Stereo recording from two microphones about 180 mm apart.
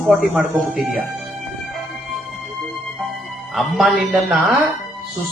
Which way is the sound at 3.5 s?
Centre (ahead or behind).